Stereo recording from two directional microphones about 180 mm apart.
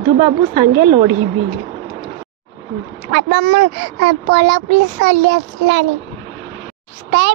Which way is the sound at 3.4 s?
60° right (ahead or behind).